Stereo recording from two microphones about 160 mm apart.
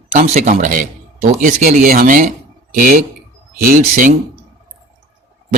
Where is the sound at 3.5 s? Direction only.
60° right (ahead or behind).